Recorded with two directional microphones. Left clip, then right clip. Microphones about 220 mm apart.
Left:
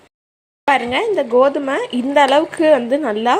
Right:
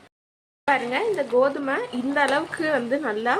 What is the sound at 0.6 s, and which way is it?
Speech, 20° left (ahead or behind).